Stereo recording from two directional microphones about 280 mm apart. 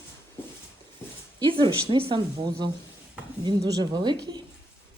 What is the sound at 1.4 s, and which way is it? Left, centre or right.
Speech, centre.